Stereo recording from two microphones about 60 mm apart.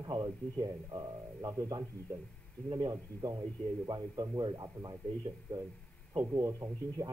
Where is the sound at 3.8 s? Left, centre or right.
Right.